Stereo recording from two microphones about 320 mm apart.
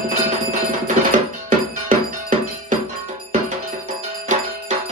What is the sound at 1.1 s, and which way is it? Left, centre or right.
Music, right.